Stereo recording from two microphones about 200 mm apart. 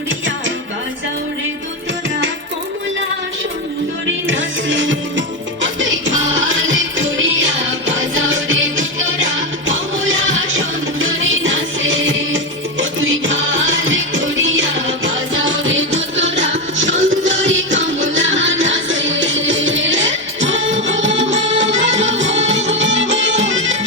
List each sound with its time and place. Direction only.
4.0 s music: 70° right (ahead or behind)